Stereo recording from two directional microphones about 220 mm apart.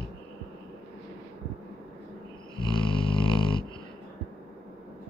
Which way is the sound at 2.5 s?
20° left (ahead or behind).